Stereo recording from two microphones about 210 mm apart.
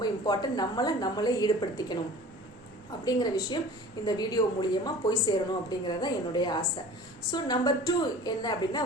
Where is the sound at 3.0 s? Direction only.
20° left (ahead or behind).